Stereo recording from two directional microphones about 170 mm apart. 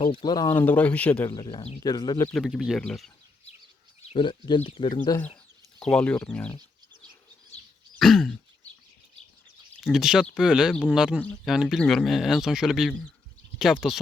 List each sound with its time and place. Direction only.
0.0 s speech: 30° left (ahead or behind)
0.6 s speech: 10° left (ahead or behind)
1.3 s speech: 25° left (ahead or behind)
2.3 s speech: centre (ahead or behind)
4.1 s speech: 30° left (ahead or behind)
5.0 s speech: 15° left (ahead or behind)
5.8 s speech: 5° left (ahead or behind)
7.9 s throat clearing: centre (ahead or behind)
9.8 s speech: 5° right (ahead or behind)